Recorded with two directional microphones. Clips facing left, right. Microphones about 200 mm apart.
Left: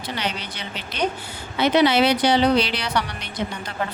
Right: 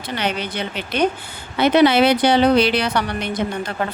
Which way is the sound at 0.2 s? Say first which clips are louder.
Right 9 dB; 55° right (ahead or behind).